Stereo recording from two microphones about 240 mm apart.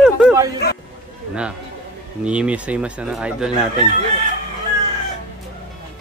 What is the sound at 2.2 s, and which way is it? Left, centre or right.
Speech, centre.